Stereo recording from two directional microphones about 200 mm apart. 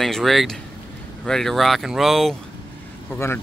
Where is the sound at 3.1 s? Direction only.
10° left (ahead or behind).